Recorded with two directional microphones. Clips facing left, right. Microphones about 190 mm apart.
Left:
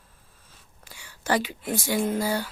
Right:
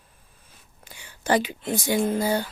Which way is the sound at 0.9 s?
20° right (ahead or behind).